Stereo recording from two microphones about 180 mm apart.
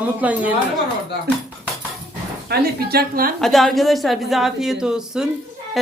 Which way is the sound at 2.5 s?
60° right (ahead or behind).